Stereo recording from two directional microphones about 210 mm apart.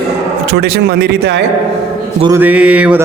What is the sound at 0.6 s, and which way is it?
Speech, 50° right (ahead or behind).